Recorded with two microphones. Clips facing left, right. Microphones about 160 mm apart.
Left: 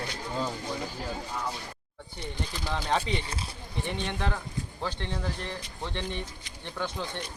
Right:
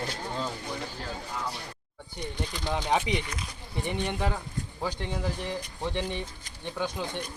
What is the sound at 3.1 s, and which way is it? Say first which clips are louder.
Speech: right 1 dB; 30° left (ahead or behind).